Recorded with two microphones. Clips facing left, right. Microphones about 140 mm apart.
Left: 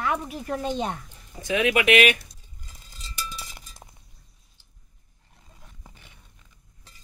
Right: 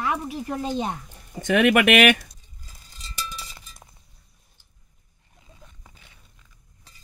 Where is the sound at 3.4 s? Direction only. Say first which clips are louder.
Right 1 dB; 20° left (ahead or behind).